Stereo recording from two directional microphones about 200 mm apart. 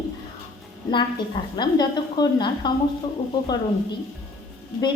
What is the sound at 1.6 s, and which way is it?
A woman's voice, 20° left (ahead or behind).